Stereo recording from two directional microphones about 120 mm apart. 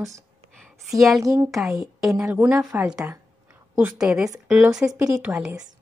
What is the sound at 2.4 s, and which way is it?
A woman's voice, 10° right (ahead or behind).